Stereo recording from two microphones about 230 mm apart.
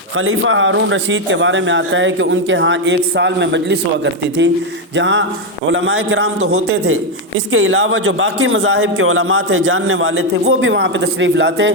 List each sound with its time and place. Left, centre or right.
0.2 s a man's voice: right